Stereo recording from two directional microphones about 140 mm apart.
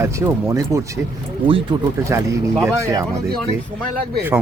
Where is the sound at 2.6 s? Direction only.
20° right (ahead or behind).